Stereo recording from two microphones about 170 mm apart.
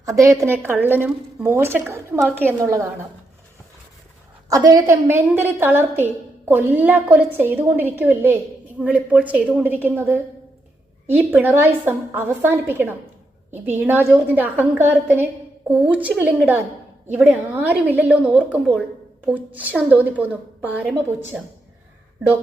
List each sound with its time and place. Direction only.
0.0 s a woman's voice: 20° right (ahead or behind)
4.4 s a woman's voice: 20° right (ahead or behind)
11.0 s a woman's voice: 10° right (ahead or behind)